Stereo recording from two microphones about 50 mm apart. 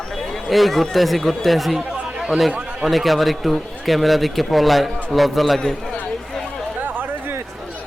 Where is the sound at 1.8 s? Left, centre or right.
Right.